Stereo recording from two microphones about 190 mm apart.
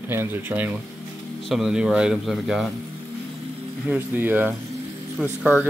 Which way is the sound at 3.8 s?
10° right (ahead or behind).